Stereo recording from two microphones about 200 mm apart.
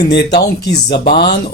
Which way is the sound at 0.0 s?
55° left (ahead or behind).